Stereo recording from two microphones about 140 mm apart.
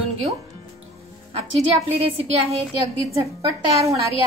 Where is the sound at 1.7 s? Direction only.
45° right (ahead or behind).